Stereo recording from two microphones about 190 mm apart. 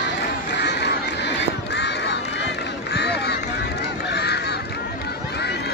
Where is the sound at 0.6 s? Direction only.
65° left (ahead or behind).